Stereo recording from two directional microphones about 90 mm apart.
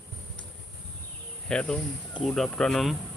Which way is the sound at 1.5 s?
10° left (ahead or behind).